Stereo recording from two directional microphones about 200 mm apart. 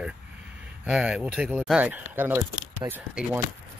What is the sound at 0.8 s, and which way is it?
Speech, 5° right (ahead or behind).